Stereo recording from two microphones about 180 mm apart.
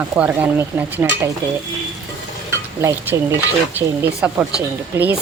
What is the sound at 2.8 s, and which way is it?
Speech, 15° right (ahead or behind).